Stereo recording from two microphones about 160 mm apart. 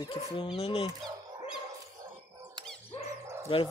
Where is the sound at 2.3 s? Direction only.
20° right (ahead or behind).